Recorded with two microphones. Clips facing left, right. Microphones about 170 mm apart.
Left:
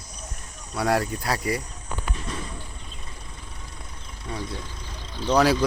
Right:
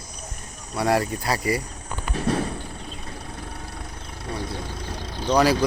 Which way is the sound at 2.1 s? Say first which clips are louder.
Right 10 dB; 65° right (ahead or behind).